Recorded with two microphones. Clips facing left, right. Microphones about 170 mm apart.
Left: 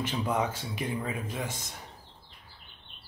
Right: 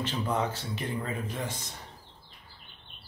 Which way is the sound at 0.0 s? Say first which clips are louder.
Left 1 dB; 10° left (ahead or behind).